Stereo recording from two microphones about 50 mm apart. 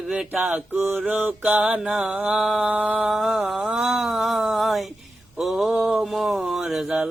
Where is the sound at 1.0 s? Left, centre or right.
Right.